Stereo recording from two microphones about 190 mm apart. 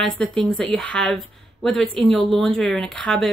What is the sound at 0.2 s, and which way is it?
A woman's voice, centre (ahead or behind).